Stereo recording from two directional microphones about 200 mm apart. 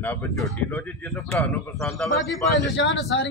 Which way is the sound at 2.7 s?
65° left (ahead or behind).